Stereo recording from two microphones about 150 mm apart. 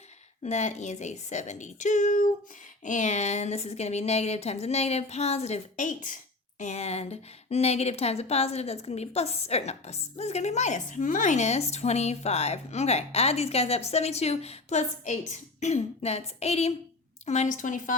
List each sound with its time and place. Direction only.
0.4 s a woman's voice: 50° left (ahead or behind)